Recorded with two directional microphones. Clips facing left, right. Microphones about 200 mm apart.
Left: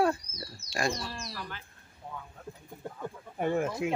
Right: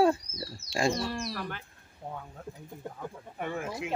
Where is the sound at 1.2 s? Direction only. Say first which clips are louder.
Right 5 dB; 55° right (ahead or behind).